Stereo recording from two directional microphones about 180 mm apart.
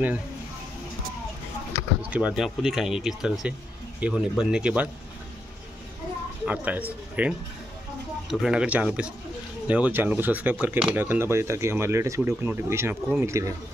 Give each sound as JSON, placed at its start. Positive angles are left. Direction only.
{"t": 2.0, "sound": "speech", "side_deg": -5}
{"t": 6.4, "sound": "speech", "side_deg": -10}